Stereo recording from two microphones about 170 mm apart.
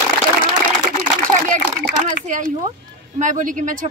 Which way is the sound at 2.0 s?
45° right (ahead or behind).